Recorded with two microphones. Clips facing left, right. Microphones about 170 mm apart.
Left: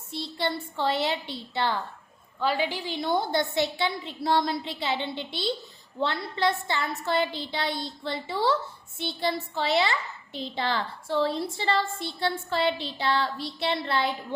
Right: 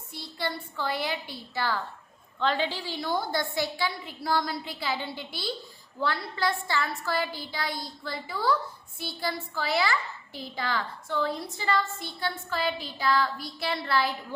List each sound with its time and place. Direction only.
0.1 s a woman's voice: 25° left (ahead or behind)
2.4 s a child's voice: 10° left (ahead or behind)